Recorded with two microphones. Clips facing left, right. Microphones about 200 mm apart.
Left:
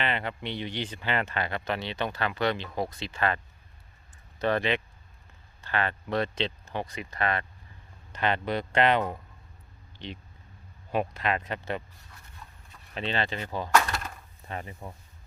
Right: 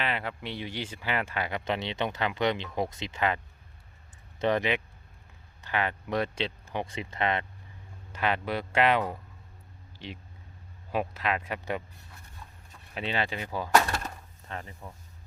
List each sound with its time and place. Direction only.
0.0 s speech: 5° right (ahead or behind)
6.8 s speech: 25° right (ahead or behind)
8.1 s speech: 5° right (ahead or behind)
12.9 s speech: 10° right (ahead or behind)
14.4 s speech: 15° left (ahead or behind)